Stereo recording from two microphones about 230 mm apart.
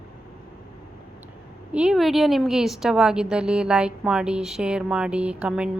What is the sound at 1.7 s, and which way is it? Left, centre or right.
A woman's voice, centre.